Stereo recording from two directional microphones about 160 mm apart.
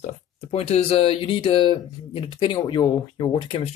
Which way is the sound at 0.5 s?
40° left (ahead or behind).